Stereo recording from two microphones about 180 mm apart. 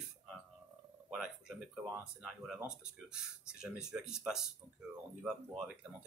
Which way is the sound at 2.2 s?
Centre (ahead or behind).